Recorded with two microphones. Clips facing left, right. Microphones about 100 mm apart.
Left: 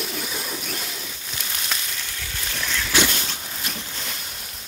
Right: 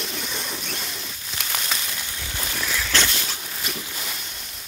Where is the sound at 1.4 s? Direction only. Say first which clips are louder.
Right 2 dB; 65° right (ahead or behind).